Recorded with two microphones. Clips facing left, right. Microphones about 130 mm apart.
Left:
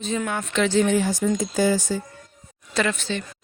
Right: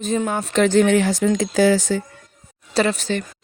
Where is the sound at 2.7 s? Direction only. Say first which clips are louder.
Right 5 dB; 35° right (ahead or behind).